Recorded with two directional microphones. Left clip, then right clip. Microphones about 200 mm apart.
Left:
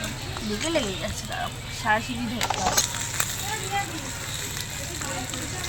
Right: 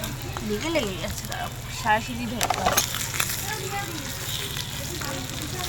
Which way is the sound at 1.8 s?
40° right (ahead or behind).